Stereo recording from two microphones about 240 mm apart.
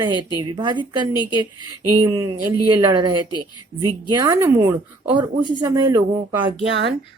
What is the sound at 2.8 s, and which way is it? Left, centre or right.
Speech, centre.